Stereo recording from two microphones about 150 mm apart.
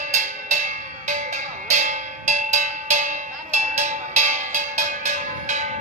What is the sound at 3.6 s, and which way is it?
Music, 50° right (ahead or behind).